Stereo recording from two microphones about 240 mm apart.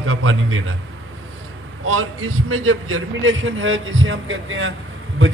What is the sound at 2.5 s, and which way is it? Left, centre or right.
A man's voice, right.